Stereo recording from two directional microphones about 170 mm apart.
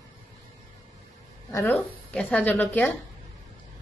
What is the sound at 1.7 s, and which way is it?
Speech, 5° left (ahead or behind).